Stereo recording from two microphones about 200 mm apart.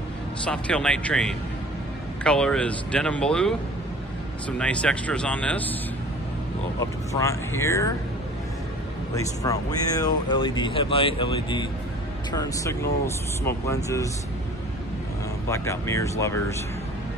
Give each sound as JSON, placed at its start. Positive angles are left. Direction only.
{"t": 0.5, "sound": "speech", "side_deg": 5}
{"t": 7.1, "sound": "speech", "side_deg": 15}
{"t": 9.1, "sound": "speech", "side_deg": 15}
{"t": 15.4, "sound": "speech", "side_deg": 15}